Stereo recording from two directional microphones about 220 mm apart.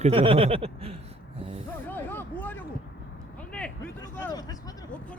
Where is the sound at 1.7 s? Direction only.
10° left (ahead or behind).